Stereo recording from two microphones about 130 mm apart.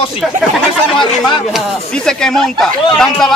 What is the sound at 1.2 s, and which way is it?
Speech, 5° left (ahead or behind).